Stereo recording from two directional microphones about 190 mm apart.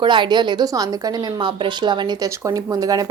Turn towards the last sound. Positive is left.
turn(degrees=-20)  # may be behind; listen again after turning